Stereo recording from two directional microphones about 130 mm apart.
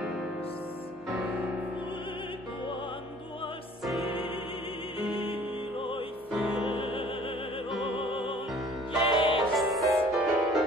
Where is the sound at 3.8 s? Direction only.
Centre (ahead or behind).